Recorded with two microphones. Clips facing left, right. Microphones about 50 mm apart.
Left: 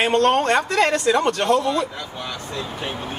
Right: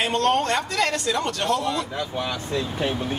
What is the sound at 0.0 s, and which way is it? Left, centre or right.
A man's voice, left.